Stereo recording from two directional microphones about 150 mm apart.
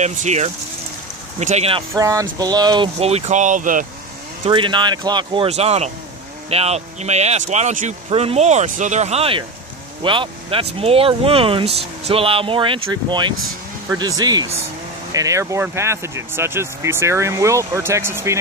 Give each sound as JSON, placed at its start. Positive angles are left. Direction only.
{"t": 0.0, "sound": "speech", "side_deg": -50}
{"t": 2.0, "sound": "speech", "side_deg": -20}
{"t": 3.0, "sound": "speech", "side_deg": -45}
{"t": 4.5, "sound": "speech", "side_deg": -30}
{"t": 8.1, "sound": "speech", "side_deg": -40}